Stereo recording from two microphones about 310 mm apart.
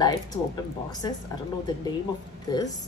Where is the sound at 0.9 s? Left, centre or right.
Centre.